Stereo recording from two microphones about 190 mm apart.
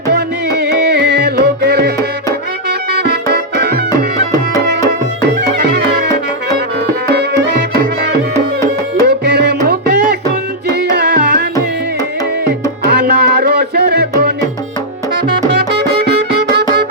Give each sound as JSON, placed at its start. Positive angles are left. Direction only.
{"t": 0.1, "sound": "music", "side_deg": -60}
{"t": 5.4, "sound": "music", "side_deg": -55}
{"t": 9.0, "sound": "music", "side_deg": -60}
{"t": 12.8, "sound": "music", "side_deg": -60}
{"t": 15.5, "sound": "music", "side_deg": -60}